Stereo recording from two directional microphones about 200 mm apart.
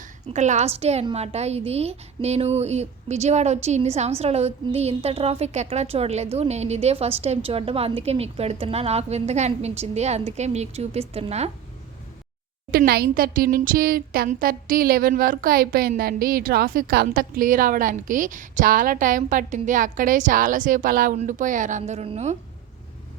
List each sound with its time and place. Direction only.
0.0 s a woman's voice: 35° right (ahead or behind)
12.7 s speech: 50° right (ahead or behind); by 22.4 s 35° right (ahead or behind)